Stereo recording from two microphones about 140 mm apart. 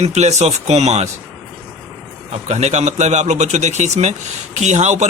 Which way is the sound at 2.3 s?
55° right (ahead or behind).